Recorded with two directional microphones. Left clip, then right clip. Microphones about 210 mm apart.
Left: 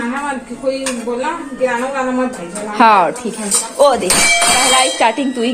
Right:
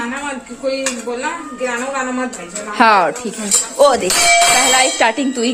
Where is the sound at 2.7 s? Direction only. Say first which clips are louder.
Left 1 dB; 15° right (ahead or behind).